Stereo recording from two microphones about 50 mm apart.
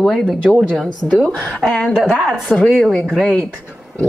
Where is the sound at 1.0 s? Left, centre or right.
Left.